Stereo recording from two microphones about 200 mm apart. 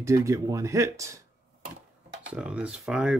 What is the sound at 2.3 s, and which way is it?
Speech, 5° right (ahead or behind).